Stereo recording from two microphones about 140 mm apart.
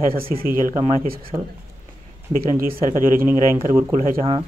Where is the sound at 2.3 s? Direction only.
90° right.